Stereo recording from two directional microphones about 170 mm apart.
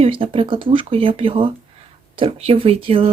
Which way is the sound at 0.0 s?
30° right (ahead or behind).